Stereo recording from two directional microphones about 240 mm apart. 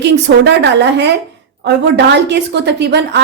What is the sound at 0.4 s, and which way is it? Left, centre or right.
A woman's voice, right.